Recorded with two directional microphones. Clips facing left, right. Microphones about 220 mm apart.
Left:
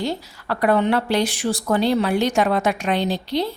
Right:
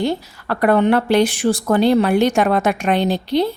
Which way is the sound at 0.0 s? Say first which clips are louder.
Right 5 dB; 55° right (ahead or behind).